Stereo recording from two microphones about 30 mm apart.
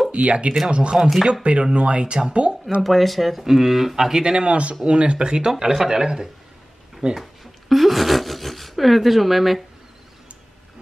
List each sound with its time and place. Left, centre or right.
0.1 s speech: right
2.8 s speech: centre
4.2 s a man's voice: right
7.6 s speech: centre